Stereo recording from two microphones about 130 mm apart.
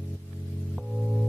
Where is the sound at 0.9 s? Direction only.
Centre (ahead or behind).